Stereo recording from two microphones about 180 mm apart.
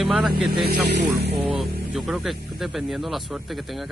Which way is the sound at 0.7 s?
70° right (ahead or behind).